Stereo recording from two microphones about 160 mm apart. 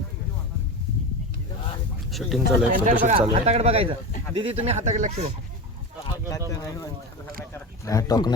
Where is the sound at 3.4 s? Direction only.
40° right (ahead or behind).